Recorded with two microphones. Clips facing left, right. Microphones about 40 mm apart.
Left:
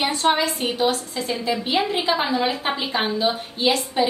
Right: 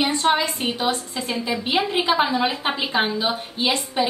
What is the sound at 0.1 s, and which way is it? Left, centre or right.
A woman's voice, centre.